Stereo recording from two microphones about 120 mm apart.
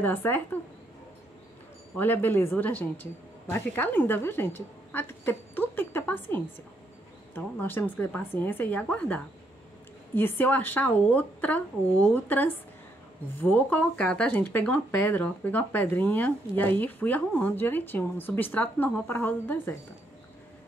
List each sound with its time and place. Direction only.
0.0 s speech: 15° left (ahead or behind)
2.0 s speech: 15° left (ahead or behind)